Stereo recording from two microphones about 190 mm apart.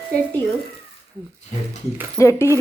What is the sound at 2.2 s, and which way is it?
Speech, 15° left (ahead or behind).